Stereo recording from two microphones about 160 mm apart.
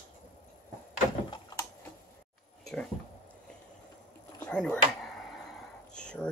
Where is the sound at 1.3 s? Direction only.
20° left (ahead or behind).